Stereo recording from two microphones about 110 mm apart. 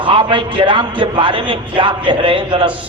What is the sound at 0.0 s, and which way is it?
A man's voice, 50° right (ahead or behind).